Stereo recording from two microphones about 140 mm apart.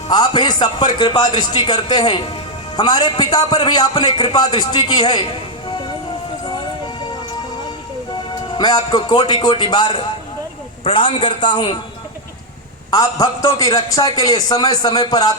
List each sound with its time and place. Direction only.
0.1 s a man's voice: 30° left (ahead or behind)
8.4 s a man's voice: 30° left (ahead or behind)
12.9 s a man's voice: 25° left (ahead or behind)